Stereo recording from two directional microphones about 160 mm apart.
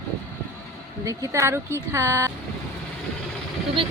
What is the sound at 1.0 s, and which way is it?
Speech, 20° right (ahead or behind).